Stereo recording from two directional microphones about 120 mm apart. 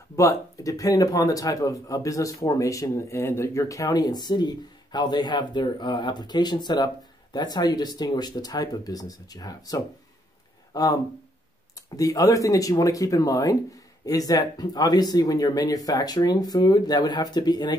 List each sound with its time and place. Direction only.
0.1 s a man's voice: 25° left (ahead or behind)
12.0 s a man's voice: 30° left (ahead or behind)